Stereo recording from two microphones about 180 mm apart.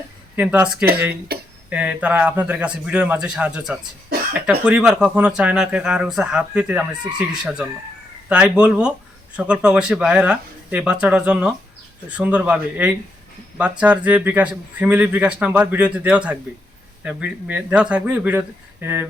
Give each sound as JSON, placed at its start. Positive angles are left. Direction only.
{"t": 0.3, "sound": "speech", "side_deg": -5}
{"t": 1.3, "sound": "a sound", "side_deg": -60}
{"t": 1.7, "sound": "speech", "side_deg": -5}